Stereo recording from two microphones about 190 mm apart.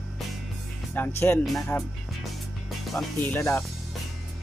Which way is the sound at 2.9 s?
10° left (ahead or behind).